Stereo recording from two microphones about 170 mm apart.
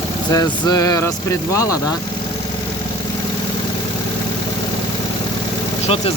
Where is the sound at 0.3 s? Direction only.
20° left (ahead or behind).